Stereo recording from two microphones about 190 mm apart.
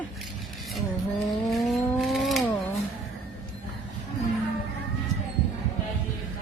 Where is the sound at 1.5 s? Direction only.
Centre (ahead or behind).